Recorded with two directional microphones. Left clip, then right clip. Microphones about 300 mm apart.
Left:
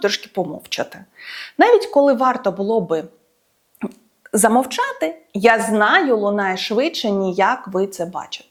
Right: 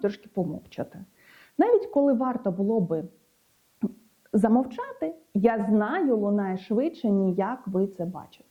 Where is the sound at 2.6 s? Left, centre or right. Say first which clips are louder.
Left 8 dB; left.